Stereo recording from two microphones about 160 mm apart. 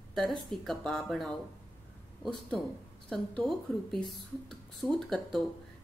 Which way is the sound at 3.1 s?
Centre (ahead or behind).